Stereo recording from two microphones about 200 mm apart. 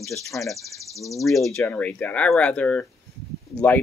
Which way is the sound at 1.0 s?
15° left (ahead or behind).